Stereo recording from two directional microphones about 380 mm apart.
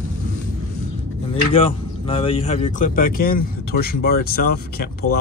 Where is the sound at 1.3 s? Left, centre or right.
Centre.